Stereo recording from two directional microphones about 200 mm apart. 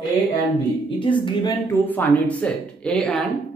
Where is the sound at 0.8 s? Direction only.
25° left (ahead or behind).